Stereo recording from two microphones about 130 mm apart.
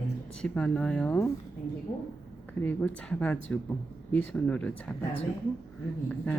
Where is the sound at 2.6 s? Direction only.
10° left (ahead or behind).